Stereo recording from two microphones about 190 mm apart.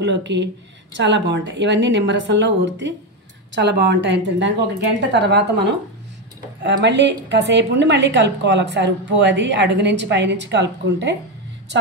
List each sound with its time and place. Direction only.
0.0 s a woman's voice: 70° right (ahead or behind)